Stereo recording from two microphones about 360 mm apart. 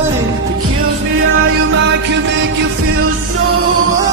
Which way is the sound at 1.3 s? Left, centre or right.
Right.